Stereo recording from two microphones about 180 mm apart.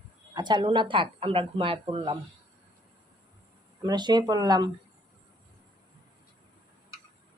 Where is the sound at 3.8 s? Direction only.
25° right (ahead or behind).